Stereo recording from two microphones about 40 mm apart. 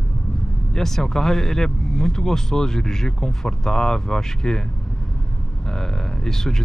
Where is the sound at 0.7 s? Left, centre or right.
Centre.